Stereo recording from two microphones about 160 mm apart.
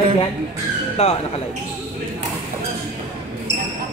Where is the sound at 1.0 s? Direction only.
40° left (ahead or behind).